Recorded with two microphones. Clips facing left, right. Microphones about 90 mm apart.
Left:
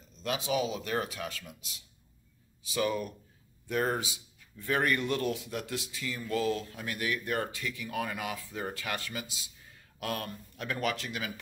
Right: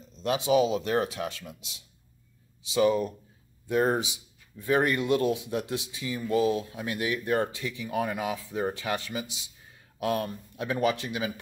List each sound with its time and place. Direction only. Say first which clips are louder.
0.2 s speech: right 7 dB; 30° right (ahead or behind)